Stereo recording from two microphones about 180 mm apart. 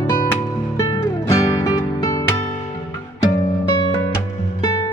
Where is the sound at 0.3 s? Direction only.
15° left (ahead or behind).